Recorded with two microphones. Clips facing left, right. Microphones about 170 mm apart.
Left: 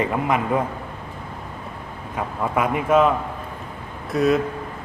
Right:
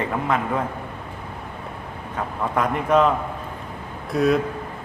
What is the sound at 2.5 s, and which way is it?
A man's voice, 5° left (ahead or behind).